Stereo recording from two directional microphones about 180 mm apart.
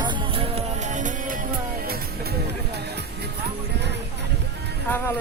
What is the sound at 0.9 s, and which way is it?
Music, 45° right (ahead or behind).